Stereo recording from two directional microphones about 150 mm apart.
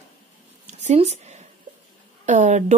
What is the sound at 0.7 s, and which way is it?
Speech, 45° right (ahead or behind).